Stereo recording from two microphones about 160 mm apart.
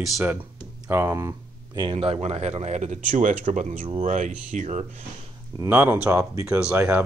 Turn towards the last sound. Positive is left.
turn(degrees=-5)  # may be behind; listen again after turning